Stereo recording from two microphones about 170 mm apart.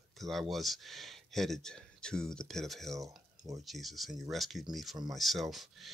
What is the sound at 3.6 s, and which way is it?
Speech, centre (ahead or behind).